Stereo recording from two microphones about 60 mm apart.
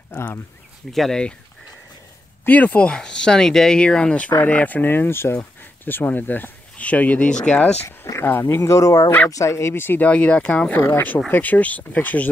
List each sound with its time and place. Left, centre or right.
0.1 s speech: left
0.9 s speech: centre
2.4 s speech: left
2.9 s speech: centre
8.3 s speech: left
8.7 s speech: left
9.3 s speech: left
9.8 s speech: left
10.0 s speech: left
10.8 s speech: left